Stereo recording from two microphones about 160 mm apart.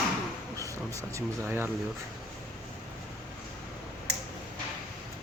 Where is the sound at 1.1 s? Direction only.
10° right (ahead or behind).